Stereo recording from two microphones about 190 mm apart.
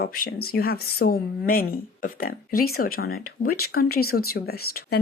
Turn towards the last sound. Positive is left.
turn(degrees=55)  # may be behind; listen again after turning